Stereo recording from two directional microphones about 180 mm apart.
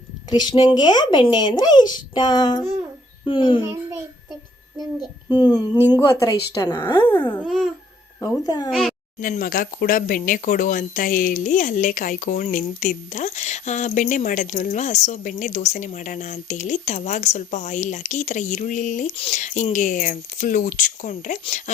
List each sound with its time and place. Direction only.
0.3 s speech: 25° left (ahead or behind)
5.3 s speech: 20° left (ahead or behind)
7.3 s babbling: centre (ahead or behind)
8.2 s speech: 25° left (ahead or behind)
9.2 s speech: 50° left (ahead or behind)